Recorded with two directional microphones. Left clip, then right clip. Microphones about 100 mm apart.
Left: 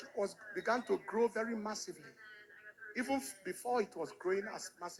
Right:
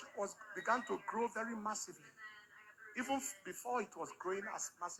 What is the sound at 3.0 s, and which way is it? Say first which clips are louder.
Speech: left 2 dB; 10° left (ahead or behind).